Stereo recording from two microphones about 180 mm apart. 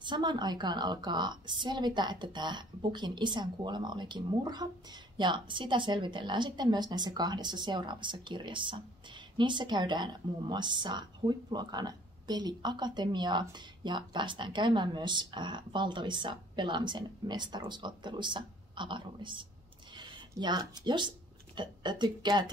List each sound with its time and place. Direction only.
0.0 s a woman's voice: 25° right (ahead or behind)